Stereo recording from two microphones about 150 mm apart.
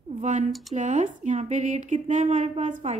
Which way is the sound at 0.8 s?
50° right (ahead or behind).